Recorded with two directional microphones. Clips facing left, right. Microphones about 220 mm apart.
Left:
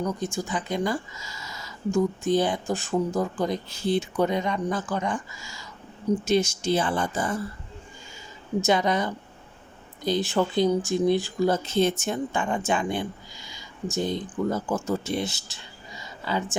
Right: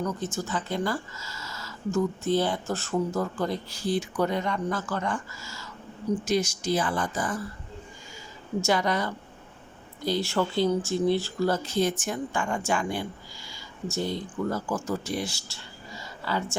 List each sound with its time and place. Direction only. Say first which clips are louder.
0.0 s speech: left 2 dB; 15° left (ahead or behind)
8.6 s speech: left 2 dB; 20° left (ahead or behind)